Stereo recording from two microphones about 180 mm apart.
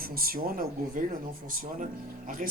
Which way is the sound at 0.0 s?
55° right (ahead or behind).